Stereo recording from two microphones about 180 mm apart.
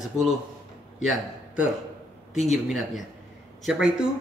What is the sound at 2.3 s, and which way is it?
Speech, centre (ahead or behind).